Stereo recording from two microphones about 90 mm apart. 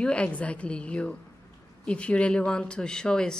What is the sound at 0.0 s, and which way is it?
Speech, 10° left (ahead or behind).